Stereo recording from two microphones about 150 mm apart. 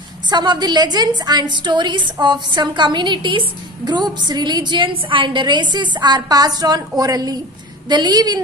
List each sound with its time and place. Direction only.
0.3 s a woman's voice: 30° right (ahead or behind)